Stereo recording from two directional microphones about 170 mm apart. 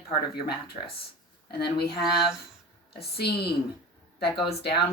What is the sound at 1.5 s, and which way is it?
Speech, 70° left (ahead or behind).